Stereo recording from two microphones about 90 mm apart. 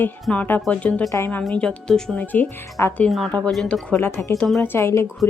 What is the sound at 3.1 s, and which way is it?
Speech, centre (ahead or behind).